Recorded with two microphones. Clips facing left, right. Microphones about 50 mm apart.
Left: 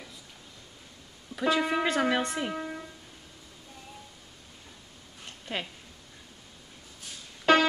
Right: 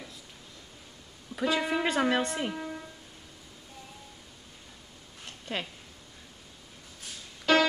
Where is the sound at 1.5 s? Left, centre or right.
Centre.